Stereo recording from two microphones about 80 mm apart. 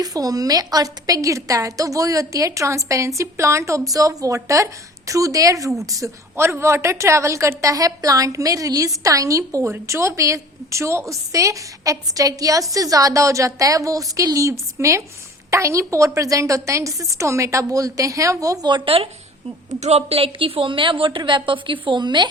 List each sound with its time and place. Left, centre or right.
0.0 s a woman's voice: right
20.4 s a woman's voice: right